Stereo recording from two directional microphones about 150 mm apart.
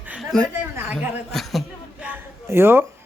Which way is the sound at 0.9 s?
Centre (ahead or behind).